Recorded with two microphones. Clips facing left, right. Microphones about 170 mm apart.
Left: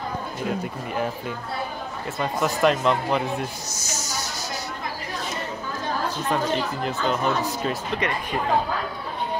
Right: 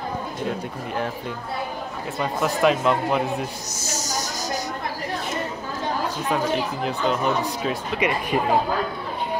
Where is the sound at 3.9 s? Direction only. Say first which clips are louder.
Right 3 dB; 40° right (ahead or behind).